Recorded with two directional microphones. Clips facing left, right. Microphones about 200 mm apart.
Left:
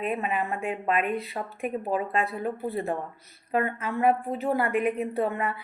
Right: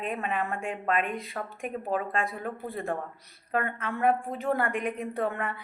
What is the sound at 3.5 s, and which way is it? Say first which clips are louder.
A woman's voice: left 3 dB; 15° left (ahead or behind).